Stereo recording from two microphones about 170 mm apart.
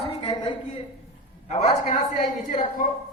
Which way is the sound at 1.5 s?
40° left (ahead or behind).